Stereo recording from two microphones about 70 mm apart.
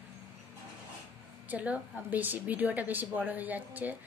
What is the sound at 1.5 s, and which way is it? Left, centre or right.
A woman's voice, centre.